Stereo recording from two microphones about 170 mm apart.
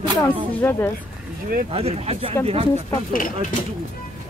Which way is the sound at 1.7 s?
35° right (ahead or behind).